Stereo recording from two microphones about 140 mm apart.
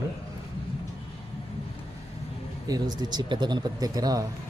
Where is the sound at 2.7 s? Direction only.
30° right (ahead or behind).